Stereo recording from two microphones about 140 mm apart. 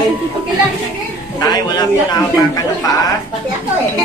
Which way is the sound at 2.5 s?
25° left (ahead or behind).